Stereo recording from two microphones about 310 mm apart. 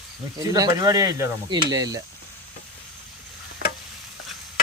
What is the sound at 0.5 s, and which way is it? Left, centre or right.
Speech, centre.